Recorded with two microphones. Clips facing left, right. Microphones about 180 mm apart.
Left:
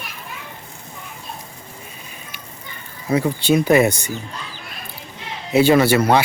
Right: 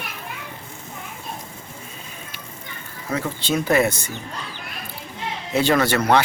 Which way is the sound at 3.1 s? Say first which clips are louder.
Left 7 dB; 15° left (ahead or behind).